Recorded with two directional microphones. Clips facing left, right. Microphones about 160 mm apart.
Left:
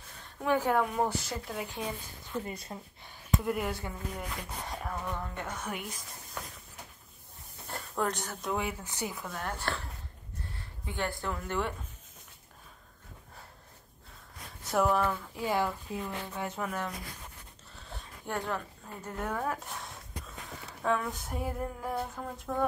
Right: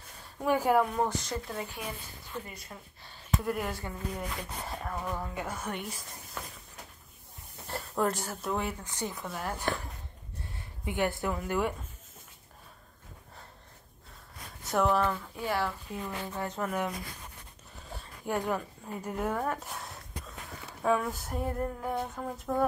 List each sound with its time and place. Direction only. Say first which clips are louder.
0.2 s a woman's voice: right 1 dB; 10° right (ahead or behind)
0.9 s speech: even; 5° left (ahead or behind)
2.4 s speech: left 6 dB; 25° left (ahead or behind)
3.1 s speech: left 1 dB; 15° left (ahead or behind)
4.1 s a sound: right 2 dB; centre (ahead or behind)
7.6 s speech: right 3 dB; centre (ahead or behind)
8.8 s speech: right 1 dB; 10° left (ahead or behind)
9.1 s speech: right 1 dB; centre (ahead or behind)
10.9 s speech: right 4 dB; 20° right (ahead or behind)
14.6 s a sound: right 1 dB; centre (ahead or behind); by 16.0 s 15° left (ahead or behind)
16.0 s a sound: right 3 dB; 5° left (ahead or behind)
17.7 s speech: right 2 dB; 10° right (ahead or behind)
20.6 s a sound: right 3 dB; 5° right (ahead or behind)